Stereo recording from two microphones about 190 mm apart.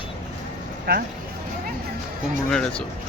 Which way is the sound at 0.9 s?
55° right (ahead or behind).